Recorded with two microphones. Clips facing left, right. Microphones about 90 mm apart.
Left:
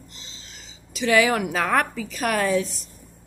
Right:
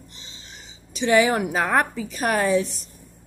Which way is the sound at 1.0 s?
30° right (ahead or behind).